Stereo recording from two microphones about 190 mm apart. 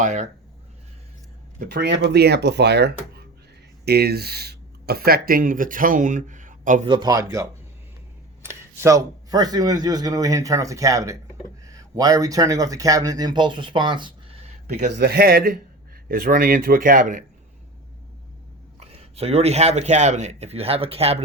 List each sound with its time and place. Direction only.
0.0 s a man's voice: 40° right (ahead or behind)
1.5 s speech: 60° right (ahead or behind); by 6.8 s 45° right (ahead or behind)
6.8 s speech: 20° right (ahead or behind)
14.9 s speech: 55° right (ahead or behind)
18.8 s a man's voice: 30° right (ahead or behind)